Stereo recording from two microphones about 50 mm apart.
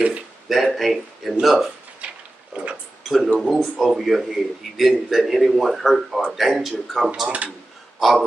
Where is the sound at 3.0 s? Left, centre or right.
Centre.